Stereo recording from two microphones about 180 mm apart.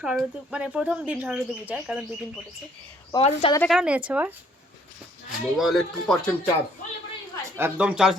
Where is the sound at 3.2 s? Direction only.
35° left (ahead or behind).